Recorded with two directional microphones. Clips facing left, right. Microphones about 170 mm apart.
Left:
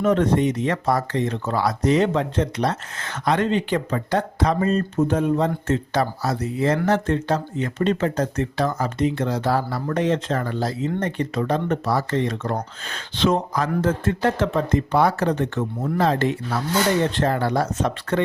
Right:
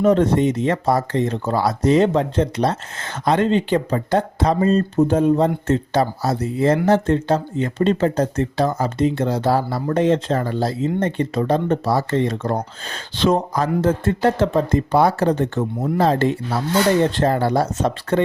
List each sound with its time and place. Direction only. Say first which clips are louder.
0.0 s speech: right 3 dB; 35° right (ahead or behind)